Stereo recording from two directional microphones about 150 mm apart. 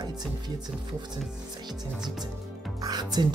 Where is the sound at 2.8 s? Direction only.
25° right (ahead or behind).